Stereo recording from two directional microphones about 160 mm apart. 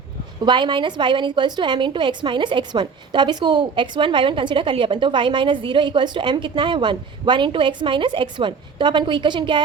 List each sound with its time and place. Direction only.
0.4 s a woman's voice: 30° right (ahead or behind)